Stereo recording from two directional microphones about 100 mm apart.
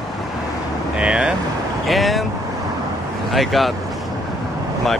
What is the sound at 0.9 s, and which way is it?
Speech, 10° right (ahead or behind).